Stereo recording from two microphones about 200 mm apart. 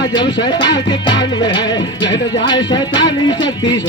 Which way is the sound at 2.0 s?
65° left (ahead or behind).